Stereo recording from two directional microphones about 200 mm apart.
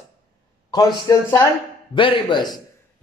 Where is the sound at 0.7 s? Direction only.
20° left (ahead or behind).